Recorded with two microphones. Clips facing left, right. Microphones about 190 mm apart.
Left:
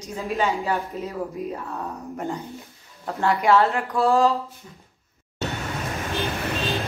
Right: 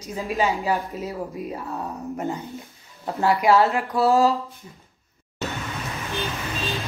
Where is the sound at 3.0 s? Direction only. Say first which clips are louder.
Right 1 dB; 10° right (ahead or behind).